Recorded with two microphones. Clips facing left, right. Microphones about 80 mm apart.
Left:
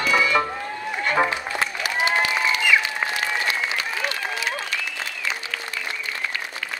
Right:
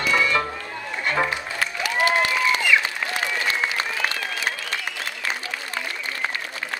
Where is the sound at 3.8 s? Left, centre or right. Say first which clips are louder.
Right 1 dB; right.